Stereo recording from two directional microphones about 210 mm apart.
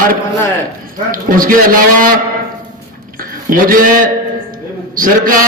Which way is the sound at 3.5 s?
40° right (ahead or behind).